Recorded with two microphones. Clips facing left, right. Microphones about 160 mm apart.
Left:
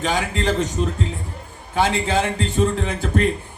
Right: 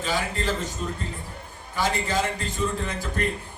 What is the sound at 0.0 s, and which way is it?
A man's voice, 75° left (ahead or behind).